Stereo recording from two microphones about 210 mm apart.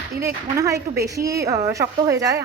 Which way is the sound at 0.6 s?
15° right (ahead or behind).